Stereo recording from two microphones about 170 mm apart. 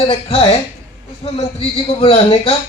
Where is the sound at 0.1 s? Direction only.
35° left (ahead or behind).